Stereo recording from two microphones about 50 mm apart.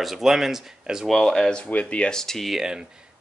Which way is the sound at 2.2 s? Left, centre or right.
Centre.